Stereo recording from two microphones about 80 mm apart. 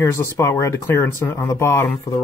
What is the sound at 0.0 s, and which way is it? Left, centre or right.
Speech, left.